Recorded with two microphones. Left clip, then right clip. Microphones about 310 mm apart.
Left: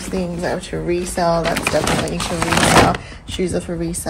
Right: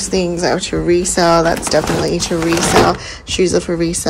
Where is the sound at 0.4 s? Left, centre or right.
Right.